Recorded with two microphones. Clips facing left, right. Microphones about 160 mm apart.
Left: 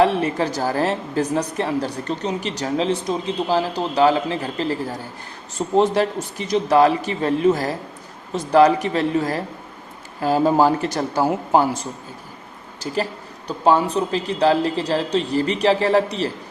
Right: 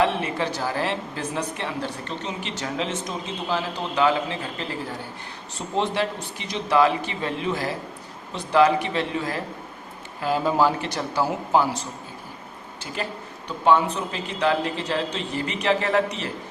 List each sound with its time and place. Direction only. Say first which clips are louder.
0.0 s a woman's voice: left 5 dB; 40° left (ahead or behind)
13.7 s a woman's voice: left 3 dB; 35° left (ahead or behind)